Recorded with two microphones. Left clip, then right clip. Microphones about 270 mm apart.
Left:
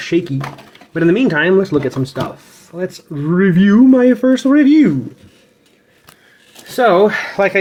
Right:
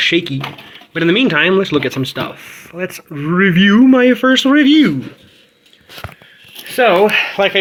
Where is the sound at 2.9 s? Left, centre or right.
Right.